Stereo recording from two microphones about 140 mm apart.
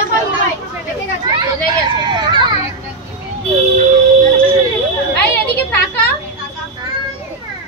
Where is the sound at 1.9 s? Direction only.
30° right (ahead or behind).